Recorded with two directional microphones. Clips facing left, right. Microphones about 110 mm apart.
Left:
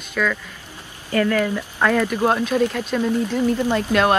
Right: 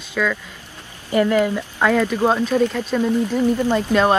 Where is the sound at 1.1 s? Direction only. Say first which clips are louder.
Right 3 dB; 20° right (ahead or behind).